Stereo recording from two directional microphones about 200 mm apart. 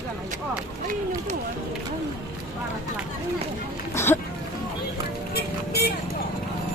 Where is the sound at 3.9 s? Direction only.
10° left (ahead or behind).